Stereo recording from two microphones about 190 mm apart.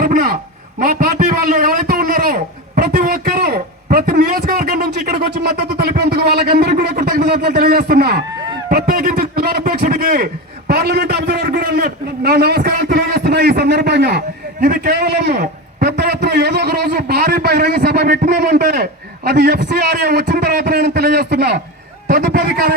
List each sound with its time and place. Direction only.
0.0 s a sound: 50° right (ahead or behind)
0.8 s a man's voice: 50° right (ahead or behind)
22.0 s a man's voice: 50° right (ahead or behind)